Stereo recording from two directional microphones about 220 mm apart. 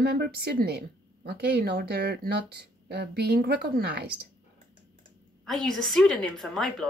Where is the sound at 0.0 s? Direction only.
45° right (ahead or behind).